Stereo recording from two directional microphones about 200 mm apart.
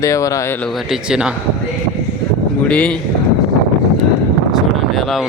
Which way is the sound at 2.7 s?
5° left (ahead or behind).